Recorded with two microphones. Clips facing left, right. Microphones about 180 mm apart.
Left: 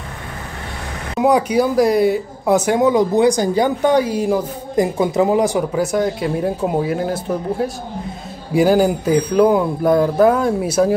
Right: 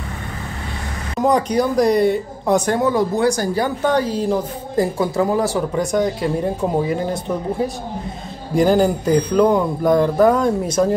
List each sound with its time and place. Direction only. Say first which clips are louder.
1.2 s speech: left 2 dB; 10° left (ahead or behind)
2.8 s a woman's voice: left 4 dB; 20° left (ahead or behind)
5.7 s a woman's voice: left 1 dB; 5° left (ahead or behind)